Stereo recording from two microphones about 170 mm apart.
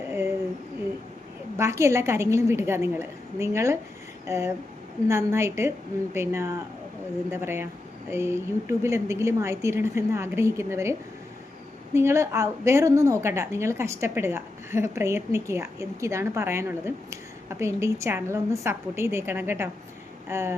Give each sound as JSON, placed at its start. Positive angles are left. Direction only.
{"t": 1.5, "sound": "a woman's voice", "side_deg": -15}
{"t": 11.9, "sound": "a woman's voice", "side_deg": -15}